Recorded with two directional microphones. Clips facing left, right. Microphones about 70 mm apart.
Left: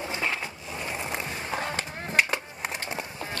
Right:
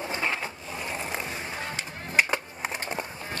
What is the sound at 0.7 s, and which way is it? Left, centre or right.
Skateboard, centre.